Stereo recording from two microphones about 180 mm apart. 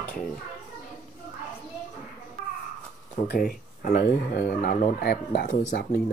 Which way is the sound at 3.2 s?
55° left (ahead or behind).